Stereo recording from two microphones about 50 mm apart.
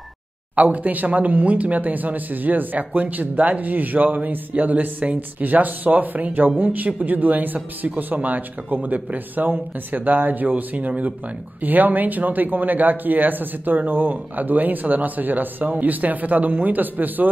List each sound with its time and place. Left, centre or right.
0.6 s speech: right